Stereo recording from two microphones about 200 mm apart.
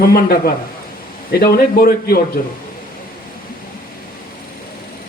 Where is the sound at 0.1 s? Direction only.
50° left (ahead or behind).